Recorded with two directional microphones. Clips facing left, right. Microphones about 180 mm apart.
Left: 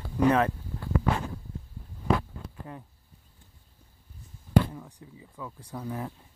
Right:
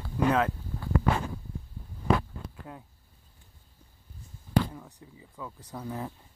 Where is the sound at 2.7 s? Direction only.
5° right (ahead or behind).